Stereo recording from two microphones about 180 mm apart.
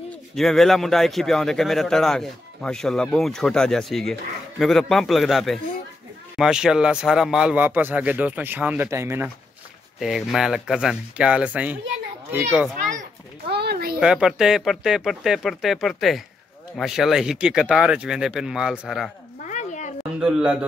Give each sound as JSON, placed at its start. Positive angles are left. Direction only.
{"t": 0.4, "sound": "a man's voice", "side_deg": 0}
{"t": 9.9, "sound": "a man's voice", "side_deg": 0}
{"t": 13.5, "sound": "a sound", "side_deg": -65}
{"t": 13.9, "sound": "a man's voice", "side_deg": -5}
{"t": 19.4, "sound": "a sound", "side_deg": 40}
{"t": 20.2, "sound": "a man's voice", "side_deg": -5}